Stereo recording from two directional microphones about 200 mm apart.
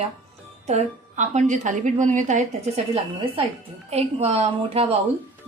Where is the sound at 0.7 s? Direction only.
35° right (ahead or behind).